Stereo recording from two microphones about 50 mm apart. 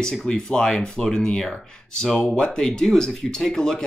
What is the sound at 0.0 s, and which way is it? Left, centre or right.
Speech, centre.